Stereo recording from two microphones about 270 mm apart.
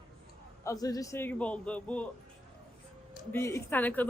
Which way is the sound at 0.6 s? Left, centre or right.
Centre.